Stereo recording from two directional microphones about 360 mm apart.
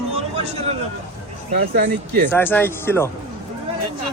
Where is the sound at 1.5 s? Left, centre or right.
Right.